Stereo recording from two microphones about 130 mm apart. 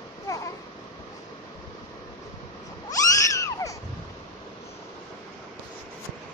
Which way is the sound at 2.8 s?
25° left (ahead or behind).